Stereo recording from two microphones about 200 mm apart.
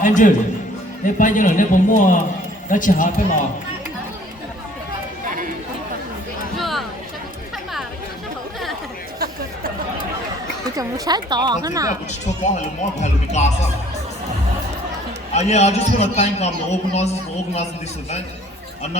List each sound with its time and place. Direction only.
0.0 s a man's voice: 40° left (ahead or behind)
6.6 s a sound: centre (ahead or behind)
10.8 s a woman's voice: 20° right (ahead or behind)
12.5 s a man's voice: 35° left (ahead or behind)
15.3 s a man's voice: 35° left (ahead or behind)